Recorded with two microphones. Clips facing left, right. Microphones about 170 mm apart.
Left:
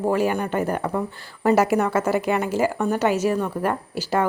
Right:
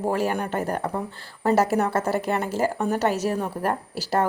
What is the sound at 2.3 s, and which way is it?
A woman's voice, 35° right (ahead or behind).